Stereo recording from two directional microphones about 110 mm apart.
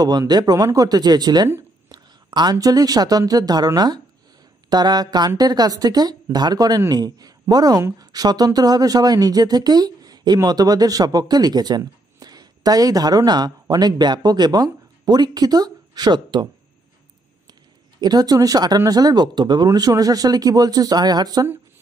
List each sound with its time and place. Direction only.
0.0 s speech: 35° right (ahead or behind)
18.0 s speech: 35° right (ahead or behind)